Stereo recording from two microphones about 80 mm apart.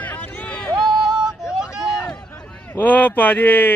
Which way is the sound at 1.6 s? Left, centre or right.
Centre.